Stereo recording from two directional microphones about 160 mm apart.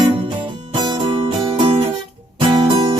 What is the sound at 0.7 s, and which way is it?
Music, 30° right (ahead or behind).